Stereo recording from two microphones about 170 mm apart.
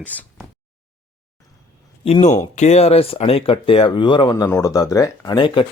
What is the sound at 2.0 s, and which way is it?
A man's voice, 35° left (ahead or behind).